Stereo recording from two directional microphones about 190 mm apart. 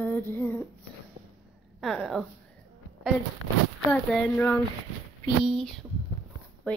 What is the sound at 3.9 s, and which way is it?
Female singing, 5° left (ahead or behind).